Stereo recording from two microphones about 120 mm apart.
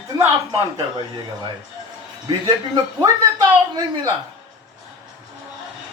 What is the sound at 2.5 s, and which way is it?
A man's voice, 35° right (ahead or behind).